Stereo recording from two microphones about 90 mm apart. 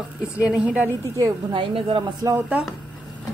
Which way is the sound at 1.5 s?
80° right.